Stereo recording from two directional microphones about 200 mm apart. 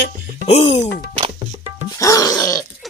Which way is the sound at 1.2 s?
30° right (ahead or behind).